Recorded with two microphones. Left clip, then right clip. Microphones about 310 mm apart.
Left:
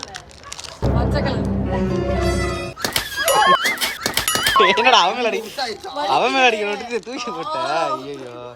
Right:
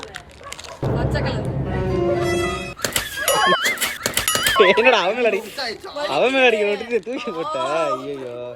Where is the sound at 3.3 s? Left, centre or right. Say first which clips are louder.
Left 3 dB; centre.